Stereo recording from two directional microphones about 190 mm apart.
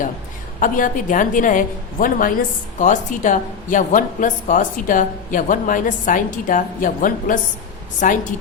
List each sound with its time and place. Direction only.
0.6 s a woman's voice: 45° left (ahead or behind)